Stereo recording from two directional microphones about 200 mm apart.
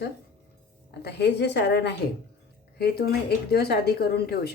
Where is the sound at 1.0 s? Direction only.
60° left (ahead or behind).